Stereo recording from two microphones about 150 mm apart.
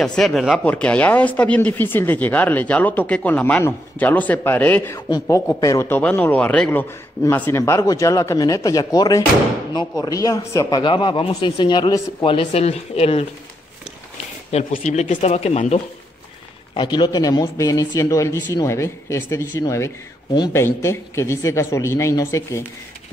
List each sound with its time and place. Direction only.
0.0 s a man's voice: 5° left (ahead or behind); by 13.3 s 40° left (ahead or behind)
14.5 s speech: 55° left (ahead or behind)
16.7 s speech: 30° left (ahead or behind)